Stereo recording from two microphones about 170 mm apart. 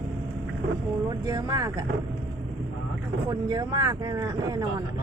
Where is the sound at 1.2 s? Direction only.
20° right (ahead or behind).